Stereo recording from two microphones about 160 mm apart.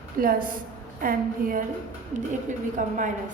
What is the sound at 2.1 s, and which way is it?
Speech, 50° right (ahead or behind).